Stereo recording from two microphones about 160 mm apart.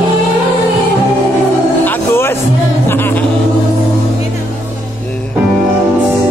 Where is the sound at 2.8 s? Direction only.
15° left (ahead or behind).